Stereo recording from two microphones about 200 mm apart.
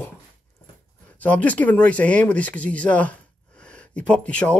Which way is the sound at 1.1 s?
10° left (ahead or behind).